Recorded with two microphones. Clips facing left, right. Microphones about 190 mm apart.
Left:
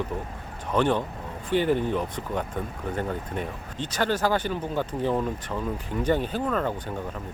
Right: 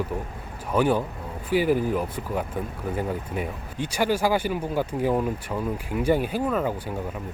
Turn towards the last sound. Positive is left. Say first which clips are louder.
# right 2 dB
turn(degrees=-10)  # may be behind; listen again after turning